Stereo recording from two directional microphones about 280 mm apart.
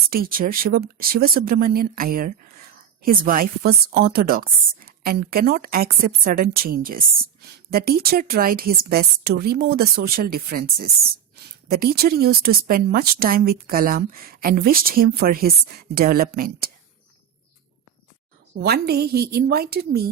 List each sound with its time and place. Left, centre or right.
0.1 s a woman's voice: right
18.5 s a woman's voice: right